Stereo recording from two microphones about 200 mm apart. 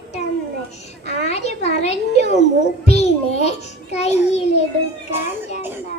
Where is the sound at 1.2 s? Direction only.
35° left (ahead or behind).